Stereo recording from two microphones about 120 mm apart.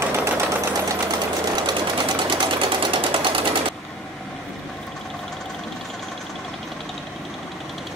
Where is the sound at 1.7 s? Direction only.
40° right (ahead or behind).